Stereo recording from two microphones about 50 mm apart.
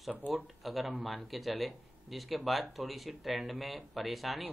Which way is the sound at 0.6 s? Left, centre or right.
Centre.